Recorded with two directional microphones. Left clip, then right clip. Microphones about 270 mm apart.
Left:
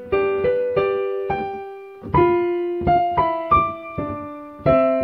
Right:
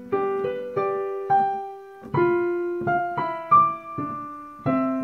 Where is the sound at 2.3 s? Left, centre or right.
Centre.